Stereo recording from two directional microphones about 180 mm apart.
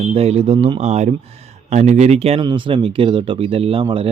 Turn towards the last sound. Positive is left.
turn(degrees=-30)  # may be behind; listen again after turning